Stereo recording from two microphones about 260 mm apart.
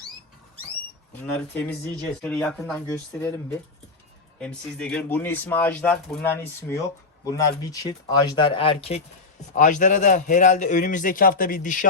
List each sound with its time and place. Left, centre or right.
2.2 s speech: centre
4.4 s a man's voice: centre; by 11.9 s left